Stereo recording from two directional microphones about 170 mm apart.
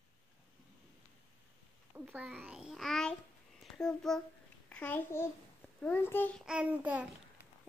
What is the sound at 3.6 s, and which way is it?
A child's voice, 5° left (ahead or behind).